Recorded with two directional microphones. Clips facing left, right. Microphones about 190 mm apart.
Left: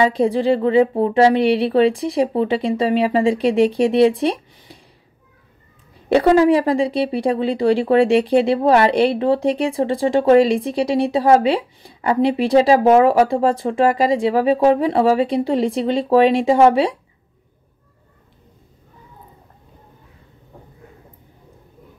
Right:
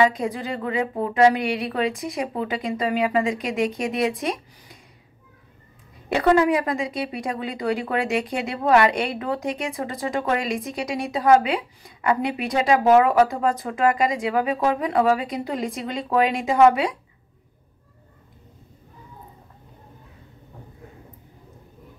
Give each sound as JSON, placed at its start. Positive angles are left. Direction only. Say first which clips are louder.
{"t": 0.0, "sound": "speech", "louder": "left 5 dB", "side_deg": 30}
{"t": 6.0, "sound": "speech", "louder": "left 6 dB", "side_deg": 30}